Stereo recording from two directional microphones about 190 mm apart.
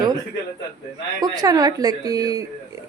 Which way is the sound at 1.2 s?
20° right (ahead or behind).